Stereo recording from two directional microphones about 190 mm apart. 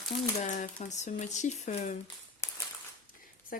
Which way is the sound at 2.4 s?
15° left (ahead or behind).